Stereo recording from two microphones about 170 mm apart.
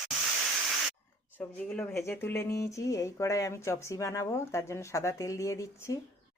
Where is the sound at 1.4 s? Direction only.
10° left (ahead or behind).